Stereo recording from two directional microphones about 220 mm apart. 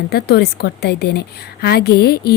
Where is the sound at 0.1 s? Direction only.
45° left (ahead or behind).